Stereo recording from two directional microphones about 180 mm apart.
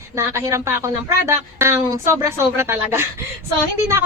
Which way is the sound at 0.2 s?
15° right (ahead or behind).